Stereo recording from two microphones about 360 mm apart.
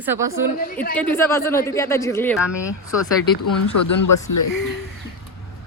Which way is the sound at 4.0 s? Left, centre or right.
Left.